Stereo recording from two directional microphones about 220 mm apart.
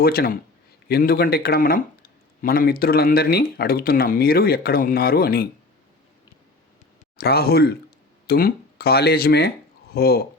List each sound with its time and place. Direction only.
0.0 s speech: 45° left (ahead or behind)
7.2 s speech: 45° left (ahead or behind)